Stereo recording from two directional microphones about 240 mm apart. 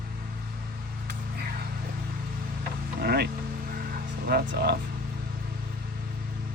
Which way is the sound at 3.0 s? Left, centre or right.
Right.